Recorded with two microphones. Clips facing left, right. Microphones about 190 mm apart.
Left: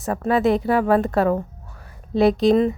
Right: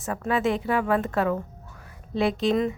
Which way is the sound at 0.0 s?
35° left (ahead or behind).